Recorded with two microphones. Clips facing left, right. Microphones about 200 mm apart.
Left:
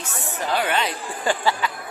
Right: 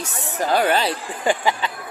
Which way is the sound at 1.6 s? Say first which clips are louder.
Left 1 dB; 30° right (ahead or behind).